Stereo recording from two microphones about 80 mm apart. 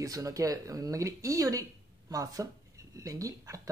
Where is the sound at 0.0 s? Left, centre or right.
Right.